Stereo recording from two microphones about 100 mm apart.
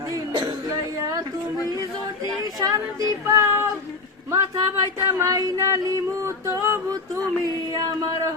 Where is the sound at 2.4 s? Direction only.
40° right (ahead or behind).